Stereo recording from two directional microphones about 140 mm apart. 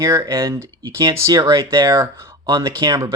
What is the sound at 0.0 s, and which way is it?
Speech, 25° right (ahead or behind).